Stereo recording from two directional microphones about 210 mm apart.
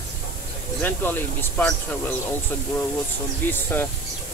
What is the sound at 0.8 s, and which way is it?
Speech, 10° left (ahead or behind).